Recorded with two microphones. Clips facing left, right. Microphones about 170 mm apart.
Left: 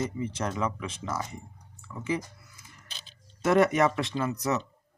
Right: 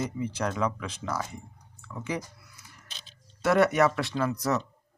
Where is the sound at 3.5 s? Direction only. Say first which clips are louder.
Even; 20° left (ahead or behind).